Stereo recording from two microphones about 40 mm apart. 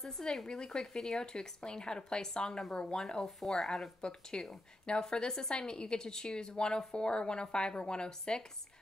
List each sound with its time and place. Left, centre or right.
0.5 s a woman's voice: centre